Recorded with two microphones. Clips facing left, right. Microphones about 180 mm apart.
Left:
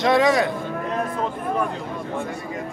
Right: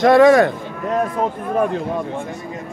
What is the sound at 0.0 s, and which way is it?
Speech, 50° right (ahead or behind).